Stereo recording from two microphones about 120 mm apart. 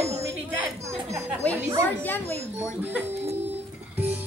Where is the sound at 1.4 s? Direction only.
10° left (ahead or behind).